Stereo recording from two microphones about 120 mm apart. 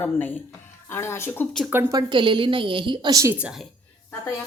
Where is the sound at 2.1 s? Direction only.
40° right (ahead or behind).